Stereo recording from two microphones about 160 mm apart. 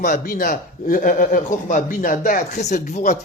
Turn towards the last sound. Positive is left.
turn(degrees=50)  # may be behind; listen again after turning